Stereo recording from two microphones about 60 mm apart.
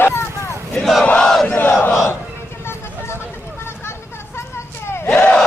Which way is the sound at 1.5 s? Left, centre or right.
Left.